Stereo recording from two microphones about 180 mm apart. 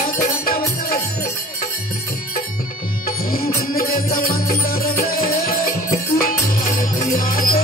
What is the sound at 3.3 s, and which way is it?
Music, 55° left (ahead or behind).